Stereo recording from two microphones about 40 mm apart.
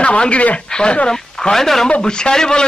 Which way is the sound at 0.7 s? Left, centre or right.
Left.